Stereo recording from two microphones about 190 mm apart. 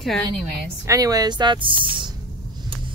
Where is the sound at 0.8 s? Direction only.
20° right (ahead or behind).